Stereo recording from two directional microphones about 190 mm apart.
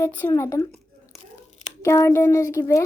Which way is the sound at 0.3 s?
15° left (ahead or behind).